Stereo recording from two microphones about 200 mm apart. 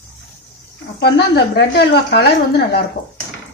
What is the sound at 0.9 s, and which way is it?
A woman's voice, 55° left (ahead or behind).